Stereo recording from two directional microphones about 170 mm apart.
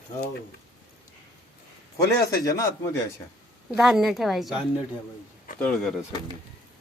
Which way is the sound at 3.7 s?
Centre (ahead or behind).